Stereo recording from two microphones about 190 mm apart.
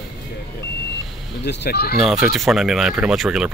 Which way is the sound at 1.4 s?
60° left (ahead or behind).